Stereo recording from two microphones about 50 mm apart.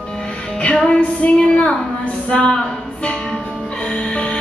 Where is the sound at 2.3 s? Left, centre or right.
Centre.